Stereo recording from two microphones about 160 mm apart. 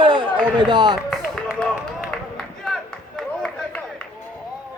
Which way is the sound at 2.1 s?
5° left (ahead or behind).